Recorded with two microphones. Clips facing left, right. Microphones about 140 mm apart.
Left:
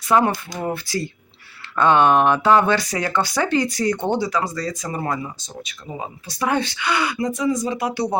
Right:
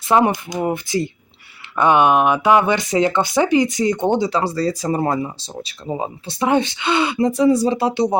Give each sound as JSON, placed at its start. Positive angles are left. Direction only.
{"t": 0.1, "sound": "speech", "side_deg": -20}